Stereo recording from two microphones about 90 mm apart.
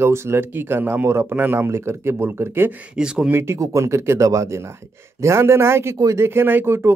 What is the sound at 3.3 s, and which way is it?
Speech, 30° right (ahead or behind).